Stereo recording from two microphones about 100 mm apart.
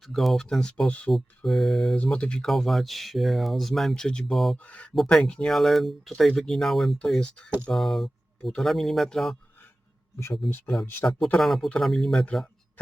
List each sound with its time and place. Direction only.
0.1 s speech: centre (ahead or behind)
1.5 s speech: centre (ahead or behind)
4.5 s speech: 15° left (ahead or behind)
11.0 s speech: 30° left (ahead or behind)
11.3 s speech: centre (ahead or behind)
12.2 s a sound: 10° left (ahead or behind)